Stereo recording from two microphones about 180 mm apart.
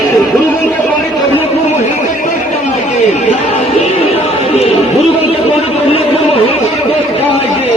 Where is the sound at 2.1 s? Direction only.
45° left (ahead or behind).